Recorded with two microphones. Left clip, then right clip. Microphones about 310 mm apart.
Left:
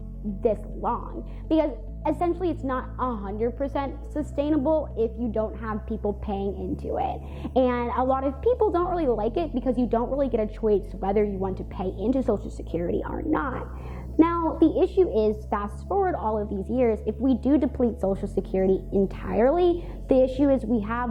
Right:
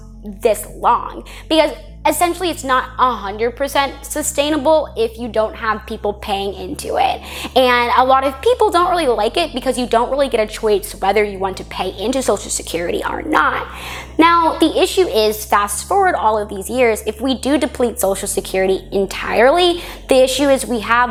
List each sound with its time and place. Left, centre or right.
0.9 s a woman's voice: centre
16.3 s a woman's voice: right
16.6 s a woman's voice: centre